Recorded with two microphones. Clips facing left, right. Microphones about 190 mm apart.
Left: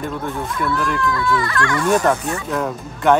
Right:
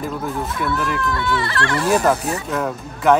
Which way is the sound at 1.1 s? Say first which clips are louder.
Left 2 dB; 30° right (ahead or behind).